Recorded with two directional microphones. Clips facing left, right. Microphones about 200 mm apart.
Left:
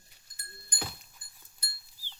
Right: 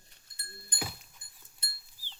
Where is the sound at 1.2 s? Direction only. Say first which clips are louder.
Even; 20° right (ahead or behind).